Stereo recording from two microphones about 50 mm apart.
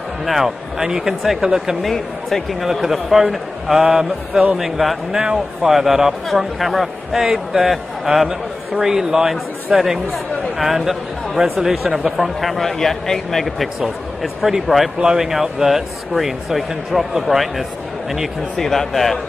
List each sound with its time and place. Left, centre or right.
0.2 s a man's voice: centre
1.8 s speech: centre
4.6 s a man's voice: centre